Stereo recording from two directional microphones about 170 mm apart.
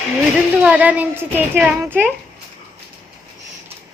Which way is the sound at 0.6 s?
10° right (ahead or behind).